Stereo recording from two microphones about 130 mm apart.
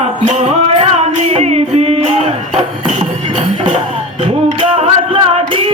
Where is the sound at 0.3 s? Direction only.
55° right (ahead or behind).